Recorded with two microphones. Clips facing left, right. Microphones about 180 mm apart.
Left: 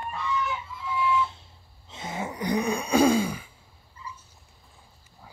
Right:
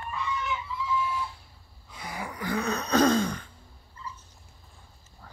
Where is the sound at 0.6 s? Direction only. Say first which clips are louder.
Left 1 dB; 55° left (ahead or behind).